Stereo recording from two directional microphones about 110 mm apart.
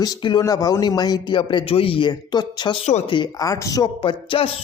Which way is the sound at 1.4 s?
50° left (ahead or behind).